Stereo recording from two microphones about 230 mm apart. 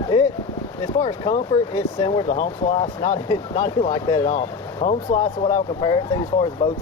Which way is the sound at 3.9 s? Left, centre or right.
Centre.